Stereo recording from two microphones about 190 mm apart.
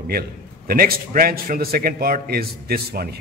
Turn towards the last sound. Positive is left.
turn(degrees=-55)  # may be behind; listen again after turning